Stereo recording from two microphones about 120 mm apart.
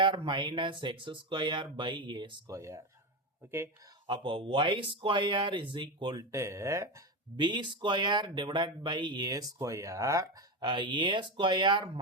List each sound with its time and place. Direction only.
0.0 s speech: 40° right (ahead or behind)
2.5 s speech: 25° right (ahead or behind)
4.0 s speech: 40° right (ahead or behind)
6.3 s speech: 25° right (ahead or behind)
7.3 s speech: 40° right (ahead or behind)